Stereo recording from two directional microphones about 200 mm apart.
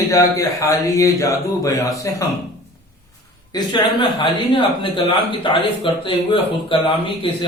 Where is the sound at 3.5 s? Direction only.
20° left (ahead or behind).